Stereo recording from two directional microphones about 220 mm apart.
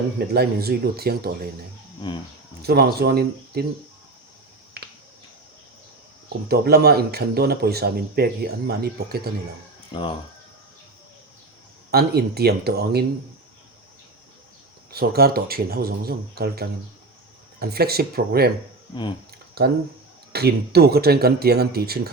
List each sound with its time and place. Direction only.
0.3 s a man's voice: 45° right (ahead or behind)
2.6 s a man's voice: 45° right (ahead or behind)
4.8 s finger snapping: 45° right (ahead or behind)
6.5 s a man's voice: 45° right (ahead or behind)
9.9 s speech: 20° left (ahead or behind)
11.9 s a man's voice: 45° right (ahead or behind)
14.9 s a man's voice: 45° right (ahead or behind)
19.6 s a man's voice: 45° right (ahead or behind)